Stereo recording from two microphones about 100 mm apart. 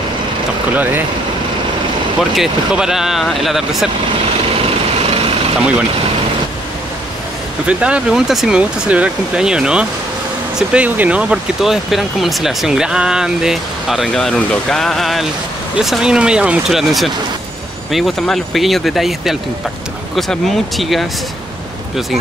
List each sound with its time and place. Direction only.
2.3 s speech: 5° right (ahead or behind)
4.6 s vehicle: 75° right (ahead or behind)
7.6 s speech: 10° right (ahead or behind)